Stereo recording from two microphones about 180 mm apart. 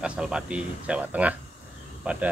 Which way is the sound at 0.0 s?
5° right (ahead or behind).